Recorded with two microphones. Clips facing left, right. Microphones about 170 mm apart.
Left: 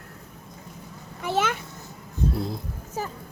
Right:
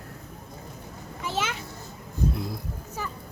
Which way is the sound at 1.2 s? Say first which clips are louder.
Left 5 dB; 60° left (ahead or behind).